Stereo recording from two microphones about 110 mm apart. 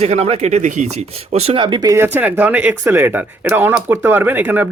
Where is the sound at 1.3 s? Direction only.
75° right (ahead or behind).